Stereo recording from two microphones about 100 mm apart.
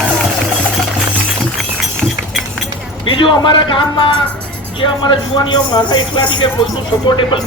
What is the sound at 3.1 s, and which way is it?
Speech, 55° left (ahead or behind).